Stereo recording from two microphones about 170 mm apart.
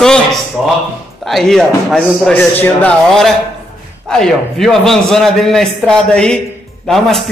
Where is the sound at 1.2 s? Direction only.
Centre (ahead or behind).